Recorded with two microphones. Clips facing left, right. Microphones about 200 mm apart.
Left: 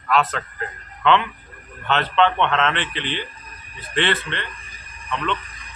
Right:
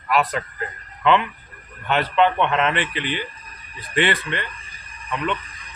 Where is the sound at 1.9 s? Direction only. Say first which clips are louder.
Even; 10° right (ahead or behind).